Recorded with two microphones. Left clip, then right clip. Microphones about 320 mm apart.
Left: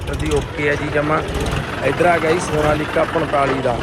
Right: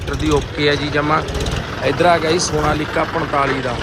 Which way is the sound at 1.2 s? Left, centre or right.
Left.